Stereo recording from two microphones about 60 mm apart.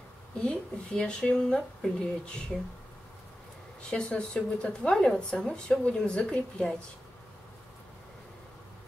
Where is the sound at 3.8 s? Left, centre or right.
Centre.